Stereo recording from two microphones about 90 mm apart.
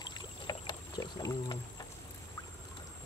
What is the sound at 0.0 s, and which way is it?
Boat, 50° left (ahead or behind).